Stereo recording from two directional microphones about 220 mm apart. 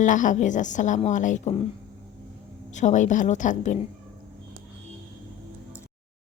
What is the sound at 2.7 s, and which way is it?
A woman's voice, 35° left (ahead or behind).